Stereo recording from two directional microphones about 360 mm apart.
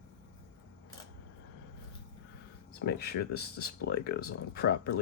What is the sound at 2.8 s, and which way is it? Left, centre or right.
Speech, left.